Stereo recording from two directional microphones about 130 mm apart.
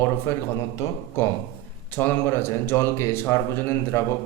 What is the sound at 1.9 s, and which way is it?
A man's voice, 15° left (ahead or behind).